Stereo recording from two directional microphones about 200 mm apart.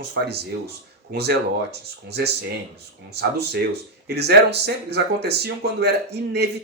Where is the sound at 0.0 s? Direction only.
55° right (ahead or behind).